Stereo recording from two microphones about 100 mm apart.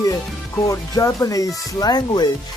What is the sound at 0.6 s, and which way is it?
Speech, 35° left (ahead or behind).